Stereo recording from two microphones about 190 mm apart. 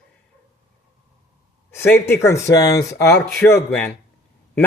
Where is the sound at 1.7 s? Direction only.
10° left (ahead or behind).